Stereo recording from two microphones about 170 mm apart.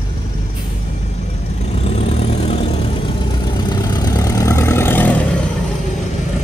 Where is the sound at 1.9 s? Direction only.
35° left (ahead or behind).